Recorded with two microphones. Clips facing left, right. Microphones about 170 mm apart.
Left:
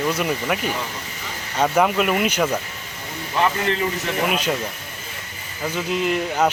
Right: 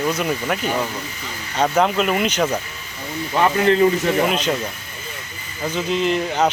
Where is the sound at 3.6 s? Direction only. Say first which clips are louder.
Right 8 dB; 35° right (ahead or behind).